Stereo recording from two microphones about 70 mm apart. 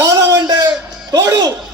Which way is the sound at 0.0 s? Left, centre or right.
Right.